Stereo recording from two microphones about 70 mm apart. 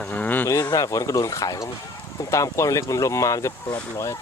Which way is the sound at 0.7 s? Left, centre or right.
Left.